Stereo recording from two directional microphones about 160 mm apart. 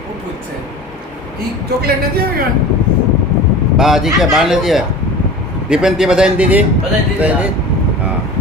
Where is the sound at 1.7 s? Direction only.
80° right.